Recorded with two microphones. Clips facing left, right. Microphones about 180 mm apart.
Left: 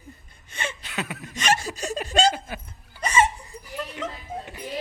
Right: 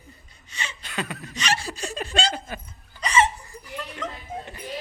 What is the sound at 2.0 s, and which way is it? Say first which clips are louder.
Laughter: left 6 dB; 45° left (ahead or behind).